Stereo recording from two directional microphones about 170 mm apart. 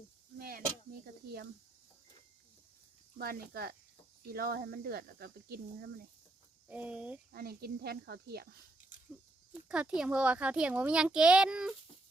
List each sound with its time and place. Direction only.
0.3 s a sound: 60° right (ahead or behind)
3.2 s speech: 65° right (ahead or behind)
6.7 s speech: 10° right (ahead or behind)
7.3 s speech: 65° right (ahead or behind)
9.6 s a child's voice: 5° right (ahead or behind)